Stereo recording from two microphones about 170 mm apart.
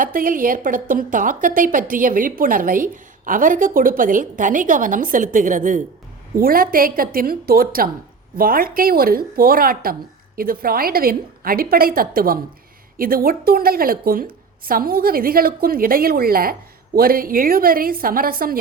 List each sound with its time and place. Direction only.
0.0 s a woman's voice: 55° right (ahead or behind)